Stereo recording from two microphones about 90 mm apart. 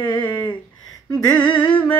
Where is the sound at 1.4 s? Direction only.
60° left (ahead or behind).